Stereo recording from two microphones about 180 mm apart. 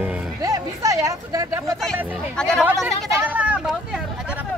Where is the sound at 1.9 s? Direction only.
10° right (ahead or behind).